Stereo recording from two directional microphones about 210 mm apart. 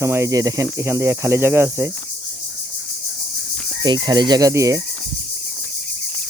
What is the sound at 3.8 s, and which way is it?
Speech, 20° right (ahead or behind).